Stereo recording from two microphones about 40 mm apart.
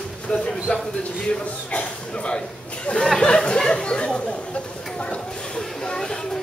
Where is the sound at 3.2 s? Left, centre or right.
Left.